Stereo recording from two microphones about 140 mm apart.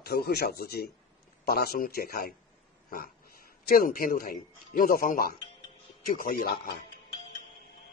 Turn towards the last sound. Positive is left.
turn(degrees=90)